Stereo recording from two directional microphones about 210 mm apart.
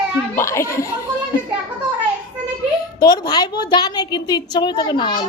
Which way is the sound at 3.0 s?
20° left (ahead or behind).